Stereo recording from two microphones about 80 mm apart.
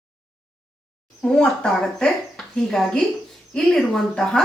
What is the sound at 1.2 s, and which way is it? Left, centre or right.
A woman's voice, centre.